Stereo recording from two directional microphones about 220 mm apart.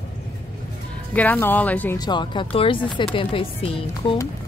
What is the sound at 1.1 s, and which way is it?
A woman's voice, 5° left (ahead or behind).